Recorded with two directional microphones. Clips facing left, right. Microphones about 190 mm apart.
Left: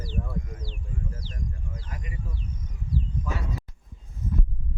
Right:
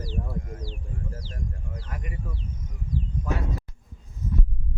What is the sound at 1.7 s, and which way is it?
Speech, 60° right (ahead or behind).